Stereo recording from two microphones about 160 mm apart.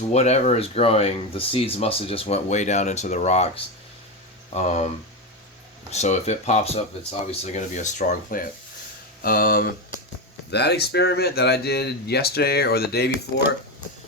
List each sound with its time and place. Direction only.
0.1 s speech: 45° left (ahead or behind)
2.2 s speech: 50° left (ahead or behind)
5.9 s speech: 45° left (ahead or behind); by 9.6 s 65° left (ahead or behind)
10.5 s speech: 90° left